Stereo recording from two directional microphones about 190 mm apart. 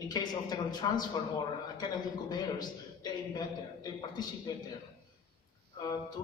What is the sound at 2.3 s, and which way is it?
A man's voice, 20° left (ahead or behind).